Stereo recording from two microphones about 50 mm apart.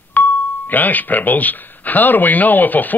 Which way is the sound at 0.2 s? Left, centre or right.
Left.